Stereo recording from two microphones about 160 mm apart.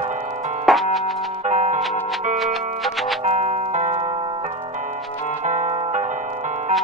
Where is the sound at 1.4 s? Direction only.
45° right (ahead or behind).